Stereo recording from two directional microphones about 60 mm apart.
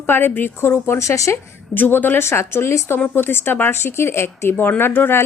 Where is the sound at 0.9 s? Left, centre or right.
Left.